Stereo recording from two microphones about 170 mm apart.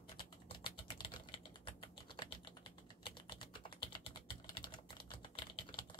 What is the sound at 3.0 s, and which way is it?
Typing, 30° left (ahead or behind).